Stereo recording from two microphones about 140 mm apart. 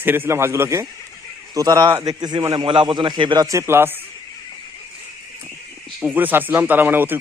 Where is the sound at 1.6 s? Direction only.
30° right (ahead or behind).